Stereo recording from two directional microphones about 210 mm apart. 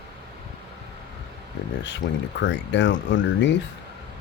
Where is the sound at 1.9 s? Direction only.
60° left (ahead or behind).